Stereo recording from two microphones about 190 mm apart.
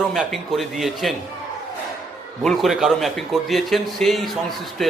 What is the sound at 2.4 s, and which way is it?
A man's voice, centre (ahead or behind).